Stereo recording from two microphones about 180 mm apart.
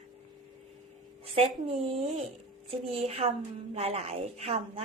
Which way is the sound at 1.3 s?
35° right (ahead or behind).